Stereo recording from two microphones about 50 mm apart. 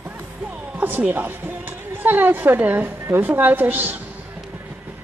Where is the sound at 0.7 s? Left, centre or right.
Right.